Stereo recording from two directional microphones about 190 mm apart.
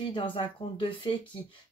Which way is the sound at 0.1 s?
25° left (ahead or behind).